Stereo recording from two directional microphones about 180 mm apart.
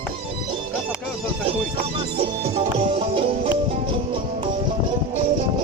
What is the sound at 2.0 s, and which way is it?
Music, 30° right (ahead or behind).